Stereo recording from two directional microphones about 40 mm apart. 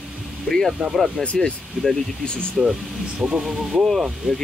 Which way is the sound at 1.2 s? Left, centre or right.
Left.